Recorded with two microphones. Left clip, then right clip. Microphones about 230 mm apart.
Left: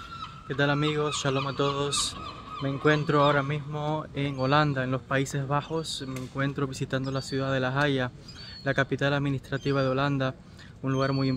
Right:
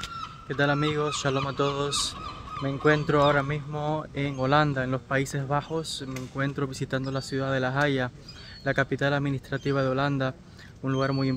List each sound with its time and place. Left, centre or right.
0.5 s speech: centre